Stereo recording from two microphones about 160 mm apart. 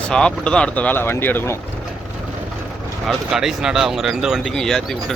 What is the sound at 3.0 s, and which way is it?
Speech, centre (ahead or behind).